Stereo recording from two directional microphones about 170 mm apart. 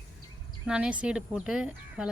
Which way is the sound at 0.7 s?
5° right (ahead or behind).